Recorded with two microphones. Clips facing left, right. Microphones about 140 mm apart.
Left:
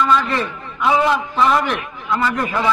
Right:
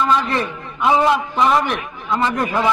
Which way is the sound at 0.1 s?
20° right (ahead or behind).